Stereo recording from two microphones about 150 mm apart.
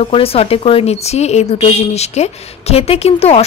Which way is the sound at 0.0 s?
40° left (ahead or behind).